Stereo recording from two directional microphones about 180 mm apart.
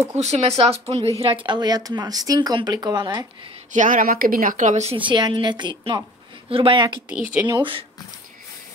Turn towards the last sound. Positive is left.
turn(degrees=-30)  # may be behind; listen again after turning